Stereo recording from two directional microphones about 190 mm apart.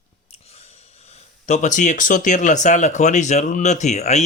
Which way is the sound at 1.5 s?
40° left (ahead or behind).